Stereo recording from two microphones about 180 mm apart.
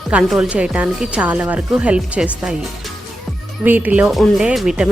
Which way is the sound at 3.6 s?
10° right (ahead or behind).